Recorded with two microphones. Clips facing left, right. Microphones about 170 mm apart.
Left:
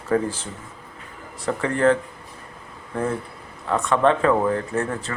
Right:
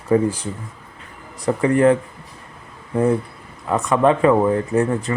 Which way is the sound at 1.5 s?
15° right (ahead or behind).